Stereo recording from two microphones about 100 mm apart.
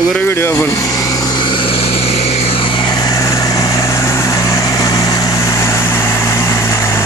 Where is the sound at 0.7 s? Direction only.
35° left (ahead or behind).